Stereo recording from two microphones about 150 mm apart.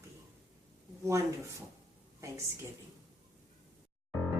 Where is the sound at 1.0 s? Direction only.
20° right (ahead or behind).